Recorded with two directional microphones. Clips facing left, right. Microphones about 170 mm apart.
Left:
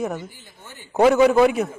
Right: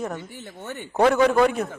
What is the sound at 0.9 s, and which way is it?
Speech, 5° left (ahead or behind).